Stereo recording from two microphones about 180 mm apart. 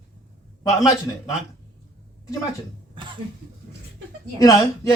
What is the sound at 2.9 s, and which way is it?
Cough, 25° right (ahead or behind).